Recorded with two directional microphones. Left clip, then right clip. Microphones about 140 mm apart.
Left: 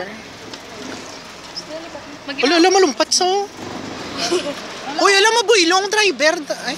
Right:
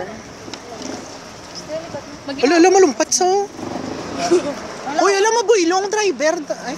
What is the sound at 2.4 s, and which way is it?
Speech, 10° right (ahead or behind).